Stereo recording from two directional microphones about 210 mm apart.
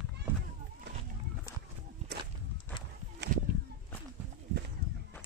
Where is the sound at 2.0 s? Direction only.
35° right (ahead or behind).